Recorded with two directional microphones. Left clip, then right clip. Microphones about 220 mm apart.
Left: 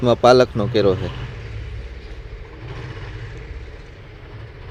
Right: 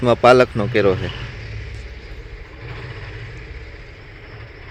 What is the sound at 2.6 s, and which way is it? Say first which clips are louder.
Vehicle: right 2 dB; 60° left (ahead or behind).